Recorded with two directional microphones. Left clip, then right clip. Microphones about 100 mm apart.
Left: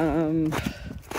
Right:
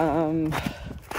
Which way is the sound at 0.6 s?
35° right (ahead or behind).